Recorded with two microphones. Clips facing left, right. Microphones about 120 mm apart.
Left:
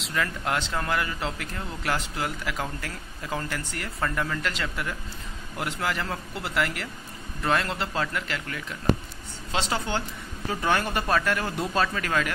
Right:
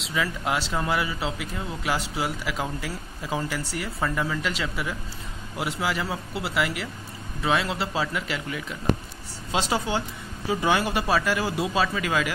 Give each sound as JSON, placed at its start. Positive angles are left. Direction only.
{"t": 0.0, "sound": "a man's voice", "side_deg": -5}